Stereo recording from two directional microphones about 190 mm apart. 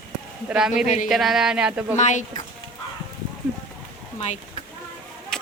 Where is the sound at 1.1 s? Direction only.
Centre (ahead or behind).